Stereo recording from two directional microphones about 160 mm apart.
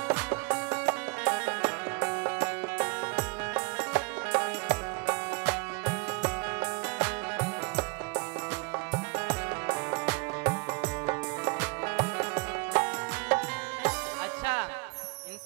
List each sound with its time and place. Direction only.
0.1 s music: 10° right (ahead or behind)
14.4 s music: 10° right (ahead or behind)